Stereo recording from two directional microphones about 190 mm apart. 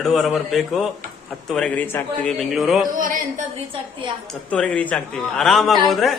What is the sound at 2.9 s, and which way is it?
Speech, 45° right (ahead or behind).